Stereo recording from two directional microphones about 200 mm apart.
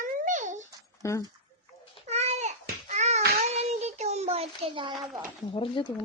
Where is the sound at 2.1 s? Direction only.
30° right (ahead or behind).